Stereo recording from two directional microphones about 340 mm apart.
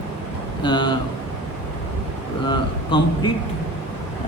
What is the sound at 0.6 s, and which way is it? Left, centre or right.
Speech, centre.